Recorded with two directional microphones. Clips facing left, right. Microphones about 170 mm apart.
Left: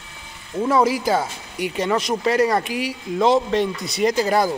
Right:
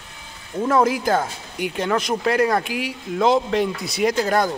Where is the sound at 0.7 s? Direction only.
5° left (ahead or behind).